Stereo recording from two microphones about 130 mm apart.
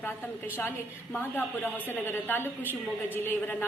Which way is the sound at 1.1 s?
15° left (ahead or behind).